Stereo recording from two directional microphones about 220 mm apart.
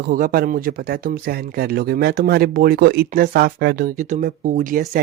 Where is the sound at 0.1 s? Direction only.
40° right (ahead or behind).